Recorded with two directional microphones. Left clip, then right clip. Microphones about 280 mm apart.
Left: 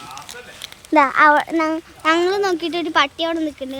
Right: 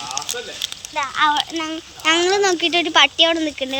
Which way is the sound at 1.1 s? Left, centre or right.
Centre.